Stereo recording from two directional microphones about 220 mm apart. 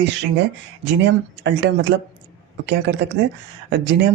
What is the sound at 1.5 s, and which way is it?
Speech, 55° right (ahead or behind).